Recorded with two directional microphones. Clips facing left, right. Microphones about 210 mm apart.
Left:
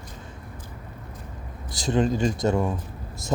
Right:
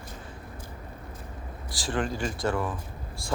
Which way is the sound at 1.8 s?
20° left (ahead or behind).